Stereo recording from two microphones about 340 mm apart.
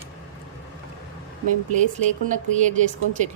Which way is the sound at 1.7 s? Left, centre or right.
Right.